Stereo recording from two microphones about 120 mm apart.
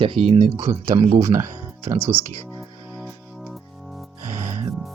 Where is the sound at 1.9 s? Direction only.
20° right (ahead or behind).